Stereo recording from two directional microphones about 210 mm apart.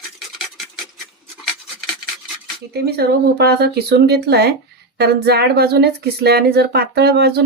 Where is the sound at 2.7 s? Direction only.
50° right (ahead or behind).